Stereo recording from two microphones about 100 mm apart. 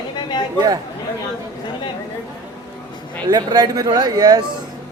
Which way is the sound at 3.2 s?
45° right (ahead or behind).